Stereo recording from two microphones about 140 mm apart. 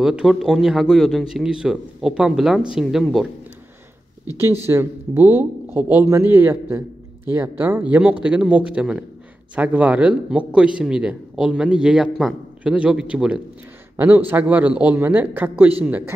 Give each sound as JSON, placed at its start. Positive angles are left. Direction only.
{"t": 0.0, "sound": "a man's voice", "side_deg": -5}
{"t": 4.6, "sound": "a man's voice", "side_deg": -15}